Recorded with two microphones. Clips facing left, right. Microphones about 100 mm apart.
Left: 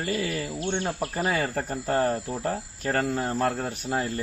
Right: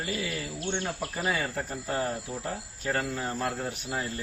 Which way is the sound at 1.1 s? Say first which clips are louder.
Left 3 dB; 40° left (ahead or behind).